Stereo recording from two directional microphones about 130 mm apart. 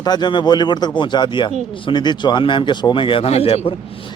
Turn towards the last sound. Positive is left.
turn(degrees=50)  # may be behind; listen again after turning